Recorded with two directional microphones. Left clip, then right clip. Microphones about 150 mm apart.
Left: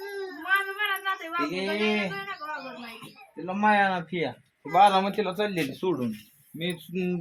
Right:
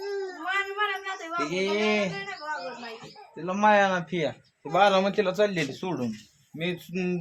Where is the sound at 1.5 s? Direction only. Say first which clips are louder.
Right 4 dB; 55° right (ahead or behind).